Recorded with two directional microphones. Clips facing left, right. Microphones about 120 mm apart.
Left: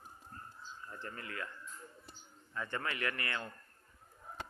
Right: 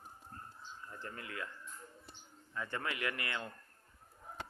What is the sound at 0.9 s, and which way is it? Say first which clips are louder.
Speech: left 1 dB; 15° right (ahead or behind).